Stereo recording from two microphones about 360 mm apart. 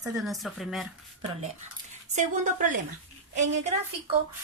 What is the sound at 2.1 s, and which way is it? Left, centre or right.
A woman's voice, right.